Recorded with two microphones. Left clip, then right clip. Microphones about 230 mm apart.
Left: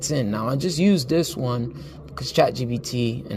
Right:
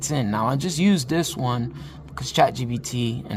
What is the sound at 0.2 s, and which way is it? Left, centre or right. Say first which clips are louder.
Speech: right 5 dB; centre.